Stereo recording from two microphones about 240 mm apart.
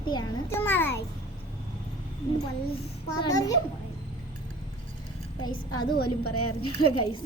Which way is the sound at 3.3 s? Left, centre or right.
Centre.